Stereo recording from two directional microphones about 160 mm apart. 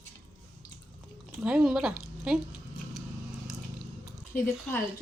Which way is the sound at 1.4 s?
5° right (ahead or behind).